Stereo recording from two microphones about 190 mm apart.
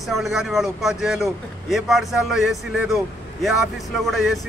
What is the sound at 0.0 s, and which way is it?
Speech, centre (ahead or behind).